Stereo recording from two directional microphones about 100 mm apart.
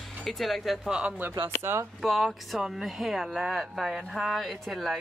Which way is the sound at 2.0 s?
Centre (ahead or behind).